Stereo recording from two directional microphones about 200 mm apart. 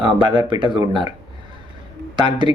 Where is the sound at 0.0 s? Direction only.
25° right (ahead or behind).